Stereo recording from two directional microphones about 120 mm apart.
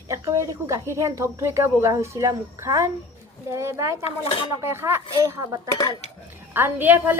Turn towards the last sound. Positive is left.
turn(degrees=-15)  # may be behind; listen again after turning